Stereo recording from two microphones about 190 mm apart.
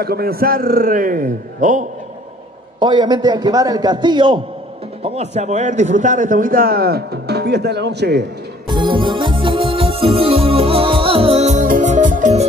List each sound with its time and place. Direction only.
0.0 s a man's voice: 55° right (ahead or behind)
2.8 s a man's voice: 25° right (ahead or behind)
5.0 s a man's voice: 35° right (ahead or behind); by 8.3 s 60° right (ahead or behind)
8.6 s organ: 25° right (ahead or behind)
11.6 s music: 45° right (ahead or behind)